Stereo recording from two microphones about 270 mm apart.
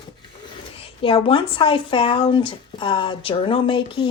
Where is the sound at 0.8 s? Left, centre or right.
Centre.